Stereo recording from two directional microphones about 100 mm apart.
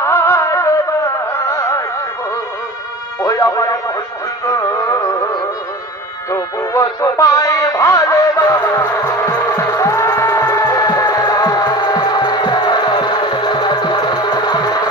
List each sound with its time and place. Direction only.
0.0 s music: 25° left (ahead or behind)
3.2 s music: 35° left (ahead or behind)
10.6 s music: 40° left (ahead or behind)